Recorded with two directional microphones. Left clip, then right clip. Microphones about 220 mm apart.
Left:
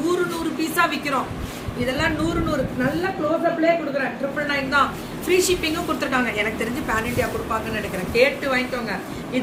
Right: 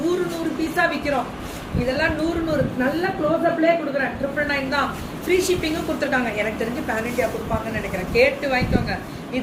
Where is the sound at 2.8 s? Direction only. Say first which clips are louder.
Right 1 dB; centre (ahead or behind).